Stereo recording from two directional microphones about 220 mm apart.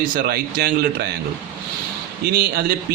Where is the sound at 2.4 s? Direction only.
45° right (ahead or behind).